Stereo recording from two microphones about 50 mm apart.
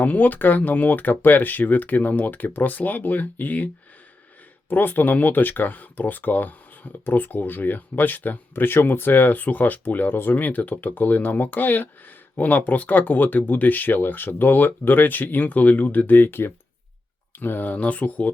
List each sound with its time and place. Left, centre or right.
0.0 s speech: left
4.7 s speech: left